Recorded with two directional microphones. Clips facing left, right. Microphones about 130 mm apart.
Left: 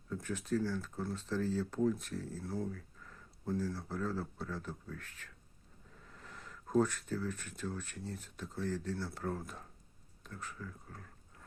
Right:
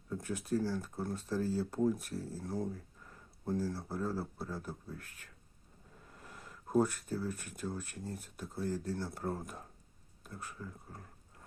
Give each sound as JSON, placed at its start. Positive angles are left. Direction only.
{"t": 0.3, "sound": "speech", "side_deg": -10}
{"t": 6.1, "sound": "a sound", "side_deg": -10}
{"t": 7.2, "sound": "speech", "side_deg": -10}